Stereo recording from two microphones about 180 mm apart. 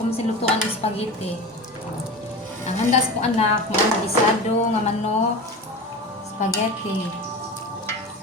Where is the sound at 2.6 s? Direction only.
35° left (ahead or behind).